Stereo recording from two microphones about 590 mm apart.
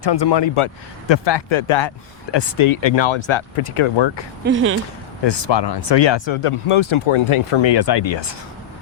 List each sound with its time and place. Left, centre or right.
0.0 s speech: left
4.4 s speech: centre
5.2 s speech: left